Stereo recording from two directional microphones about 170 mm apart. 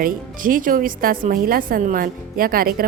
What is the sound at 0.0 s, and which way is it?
A woman's voice, 55° right (ahead or behind).